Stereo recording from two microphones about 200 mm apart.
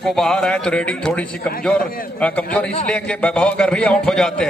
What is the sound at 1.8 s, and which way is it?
Speech, 45° left (ahead or behind).